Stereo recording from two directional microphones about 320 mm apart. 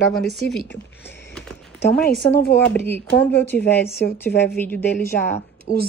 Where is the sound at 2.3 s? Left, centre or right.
Left.